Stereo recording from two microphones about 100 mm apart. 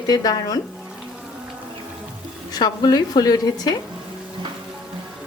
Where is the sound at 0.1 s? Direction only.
40° left (ahead or behind).